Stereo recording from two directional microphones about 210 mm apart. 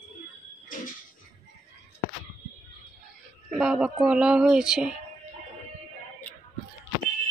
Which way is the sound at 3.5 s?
5° right (ahead or behind).